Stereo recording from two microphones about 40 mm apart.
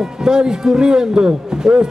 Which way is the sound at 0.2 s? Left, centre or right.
Centre.